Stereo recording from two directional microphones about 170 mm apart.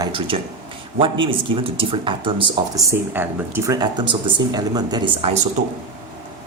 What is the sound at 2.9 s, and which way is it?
Speech, 15° right (ahead or behind).